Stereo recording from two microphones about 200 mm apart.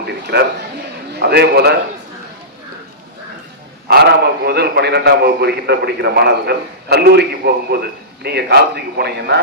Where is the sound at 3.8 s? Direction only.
55° right (ahead or behind).